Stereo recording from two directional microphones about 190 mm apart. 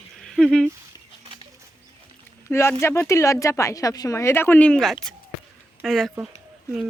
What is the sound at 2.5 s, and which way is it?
A woman's voice, 15° left (ahead or behind).